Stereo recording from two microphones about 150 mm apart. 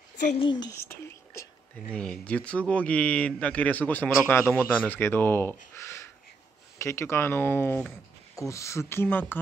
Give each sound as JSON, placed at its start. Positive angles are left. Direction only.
{"t": 0.4, "sound": "speech", "side_deg": 30}
{"t": 0.7, "sound": "whispering", "side_deg": 15}
{"t": 2.0, "sound": "a man's voice", "side_deg": 5}